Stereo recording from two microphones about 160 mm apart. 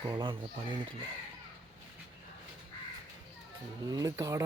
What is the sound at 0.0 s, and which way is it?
Speech, 25° right (ahead or behind).